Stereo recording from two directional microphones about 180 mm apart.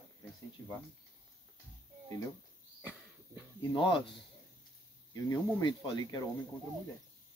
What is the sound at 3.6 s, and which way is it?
Speech, 30° left (ahead or behind).